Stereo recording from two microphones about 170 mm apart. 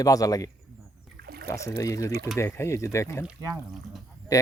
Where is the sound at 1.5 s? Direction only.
15° left (ahead or behind).